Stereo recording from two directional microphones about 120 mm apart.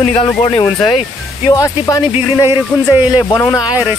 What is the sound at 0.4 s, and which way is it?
Speech, 45° left (ahead or behind).